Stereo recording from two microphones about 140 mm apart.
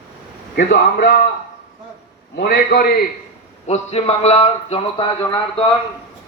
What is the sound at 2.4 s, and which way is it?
Speech, 90° left.